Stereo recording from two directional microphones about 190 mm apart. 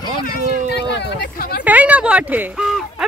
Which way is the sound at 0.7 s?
60° left (ahead or behind).